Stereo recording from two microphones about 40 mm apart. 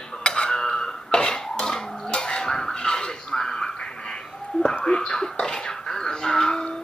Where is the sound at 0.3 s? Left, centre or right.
Centre.